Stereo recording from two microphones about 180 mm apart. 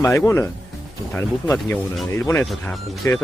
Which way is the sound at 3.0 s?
15° left (ahead or behind).